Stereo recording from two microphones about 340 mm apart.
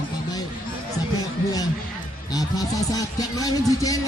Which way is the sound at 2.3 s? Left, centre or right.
Centre.